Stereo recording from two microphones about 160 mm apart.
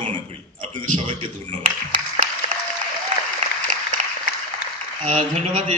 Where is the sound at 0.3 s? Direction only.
40° right (ahead or behind).